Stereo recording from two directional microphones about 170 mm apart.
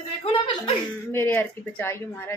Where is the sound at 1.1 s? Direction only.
10° left (ahead or behind).